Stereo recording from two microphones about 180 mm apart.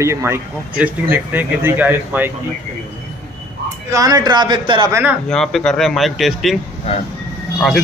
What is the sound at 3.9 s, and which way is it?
A man's voice, 20° right (ahead or behind).